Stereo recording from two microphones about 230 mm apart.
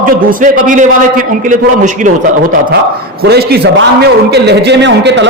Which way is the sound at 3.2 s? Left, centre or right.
Right.